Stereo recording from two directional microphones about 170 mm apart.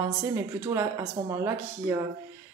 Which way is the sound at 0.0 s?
20° right (ahead or behind).